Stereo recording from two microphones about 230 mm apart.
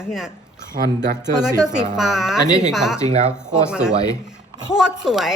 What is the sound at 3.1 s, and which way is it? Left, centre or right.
Speech, right.